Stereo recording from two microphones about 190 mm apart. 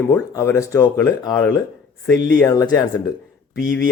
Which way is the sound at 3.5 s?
50° right (ahead or behind).